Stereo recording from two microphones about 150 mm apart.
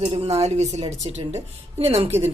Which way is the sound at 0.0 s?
35° right (ahead or behind).